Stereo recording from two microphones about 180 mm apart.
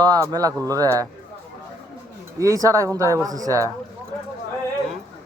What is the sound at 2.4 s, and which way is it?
Speech, 20° right (ahead or behind).